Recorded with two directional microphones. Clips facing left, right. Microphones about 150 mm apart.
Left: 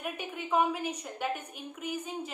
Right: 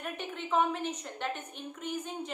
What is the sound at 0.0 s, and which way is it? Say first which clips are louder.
A woman's voice: left 1 dB; 10° left (ahead or behind).